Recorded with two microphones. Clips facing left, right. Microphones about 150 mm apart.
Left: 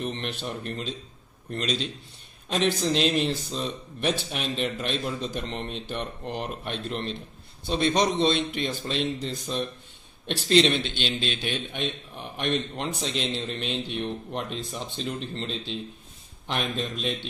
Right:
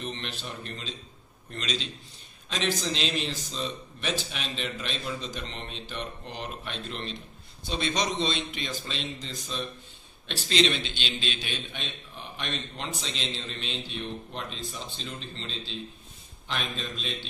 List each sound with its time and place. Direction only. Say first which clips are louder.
0.0 s a man's voice: left 5 dB; 50° left (ahead or behind)
10.3 s a man's voice: left 5 dB; 55° left (ahead or behind)